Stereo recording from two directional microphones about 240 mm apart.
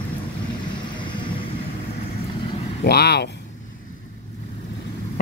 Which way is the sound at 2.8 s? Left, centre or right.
Left.